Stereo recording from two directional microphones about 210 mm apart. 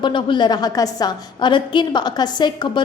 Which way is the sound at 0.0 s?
20° left (ahead or behind).